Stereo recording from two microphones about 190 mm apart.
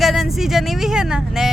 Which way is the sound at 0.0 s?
Centre (ahead or behind).